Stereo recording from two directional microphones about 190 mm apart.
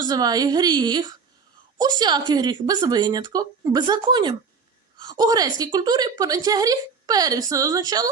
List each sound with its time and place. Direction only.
0.0 s a woman's voice: 20° right (ahead or behind)